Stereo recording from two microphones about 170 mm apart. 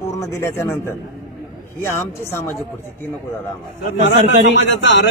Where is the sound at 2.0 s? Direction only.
15° left (ahead or behind).